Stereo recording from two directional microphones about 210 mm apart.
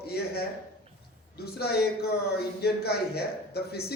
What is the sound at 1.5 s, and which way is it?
Speech, 50° left (ahead or behind).